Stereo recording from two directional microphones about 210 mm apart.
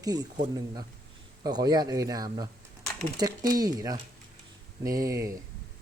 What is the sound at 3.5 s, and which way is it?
A woman's voice, 20° right (ahead or behind).